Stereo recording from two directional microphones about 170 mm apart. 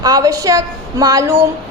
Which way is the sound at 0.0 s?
20° right (ahead or behind).